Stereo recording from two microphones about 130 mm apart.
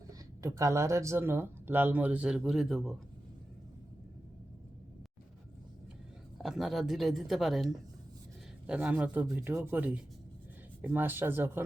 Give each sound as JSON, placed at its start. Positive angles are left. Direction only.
{"t": 0.1, "sound": "speech", "side_deg": -25}
{"t": 6.4, "sound": "speech", "side_deg": 0}